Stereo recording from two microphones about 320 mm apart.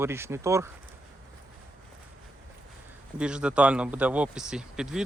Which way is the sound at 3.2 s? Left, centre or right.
Centre.